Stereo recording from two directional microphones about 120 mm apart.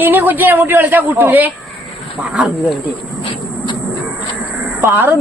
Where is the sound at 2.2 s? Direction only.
5° right (ahead or behind).